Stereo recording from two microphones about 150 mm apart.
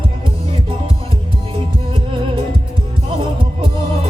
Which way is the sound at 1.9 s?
35° right (ahead or behind).